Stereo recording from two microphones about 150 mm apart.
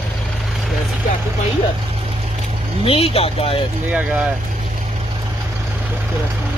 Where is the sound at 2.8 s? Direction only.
40° left (ahead or behind).